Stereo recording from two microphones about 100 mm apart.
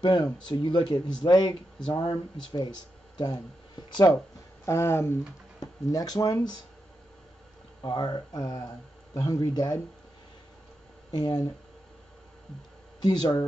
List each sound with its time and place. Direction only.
0.0 s speech: 50° left (ahead or behind)
3.2 s speech: 45° left (ahead or behind)
4.6 s speech: 25° left (ahead or behind)
5.6 s speech: 35° left (ahead or behind)
7.8 s speech: 45° left (ahead or behind)
11.1 s speech: 45° left (ahead or behind)
13.0 s speech: 45° left (ahead or behind)